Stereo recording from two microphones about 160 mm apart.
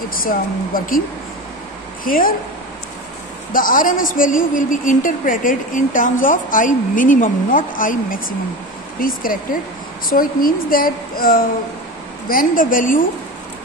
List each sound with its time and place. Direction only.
0.1 s a woman's voice: 65° left (ahead or behind)
2.0 s a woman's voice: 60° left (ahead or behind)
3.5 s a woman's voice: 60° left (ahead or behind)